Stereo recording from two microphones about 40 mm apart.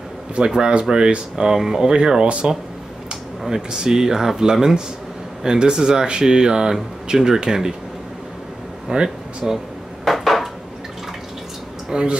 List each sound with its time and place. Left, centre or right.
0.5 s speech: centre
1.6 s speech: centre
1.9 s speech: centre
8.9 s speech: right
9.4 s speech: centre
10.0 s dishes: centre
11.9 s speech: right